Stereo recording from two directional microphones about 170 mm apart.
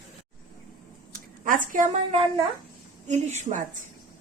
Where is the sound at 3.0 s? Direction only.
45° right (ahead or behind).